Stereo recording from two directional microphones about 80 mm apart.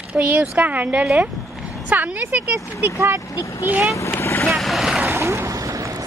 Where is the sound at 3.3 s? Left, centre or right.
Left.